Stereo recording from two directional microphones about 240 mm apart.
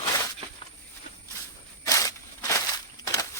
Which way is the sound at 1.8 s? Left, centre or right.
Centre.